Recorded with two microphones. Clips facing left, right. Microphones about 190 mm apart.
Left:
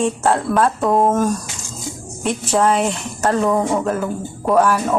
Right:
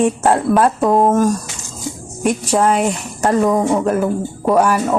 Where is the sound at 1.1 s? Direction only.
10° right (ahead or behind).